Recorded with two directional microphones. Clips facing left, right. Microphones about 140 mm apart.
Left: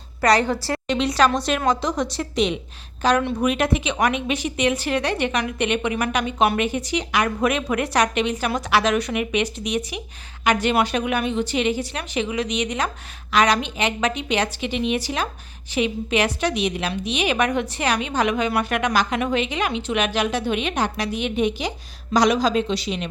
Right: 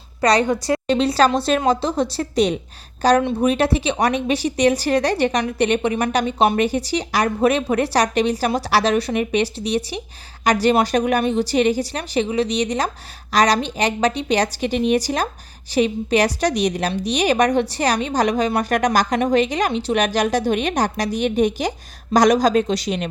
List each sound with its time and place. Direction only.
0.2 s a woman's voice: 20° right (ahead or behind)
0.9 s a woman's voice: 35° right (ahead or behind)